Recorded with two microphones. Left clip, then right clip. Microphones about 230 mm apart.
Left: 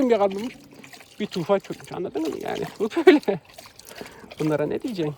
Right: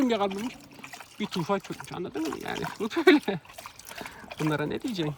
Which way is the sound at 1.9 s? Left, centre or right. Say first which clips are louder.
Left 6 dB; right.